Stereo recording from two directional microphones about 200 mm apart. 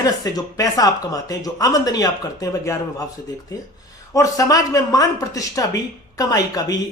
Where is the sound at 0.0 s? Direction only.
20° left (ahead or behind).